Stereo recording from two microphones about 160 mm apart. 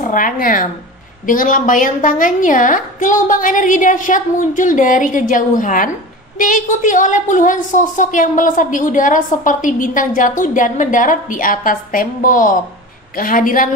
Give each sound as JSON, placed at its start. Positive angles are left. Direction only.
{"t": 0.0, "sound": "a woman's voice", "side_deg": 55}